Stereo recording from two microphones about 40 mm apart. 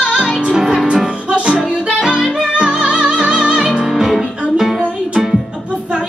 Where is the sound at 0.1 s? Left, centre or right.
Centre.